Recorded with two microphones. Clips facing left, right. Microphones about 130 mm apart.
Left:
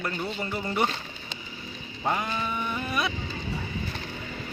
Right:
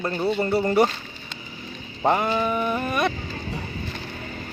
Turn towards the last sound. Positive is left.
turn(degrees=-50)  # may be behind; listen again after turning